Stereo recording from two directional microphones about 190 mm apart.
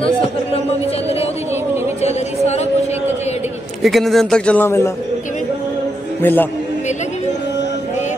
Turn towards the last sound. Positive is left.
turn(degrees=40)  # may be behind; listen again after turning